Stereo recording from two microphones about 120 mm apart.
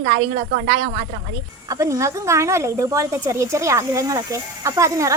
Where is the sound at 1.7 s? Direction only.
25° right (ahead or behind).